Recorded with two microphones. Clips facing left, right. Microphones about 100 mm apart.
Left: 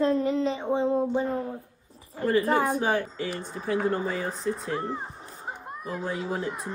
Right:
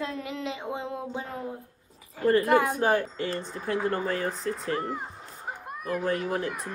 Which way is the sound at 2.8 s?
Centre (ahead or behind).